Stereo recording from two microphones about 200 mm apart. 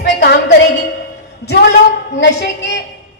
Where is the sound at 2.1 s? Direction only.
65° left (ahead or behind).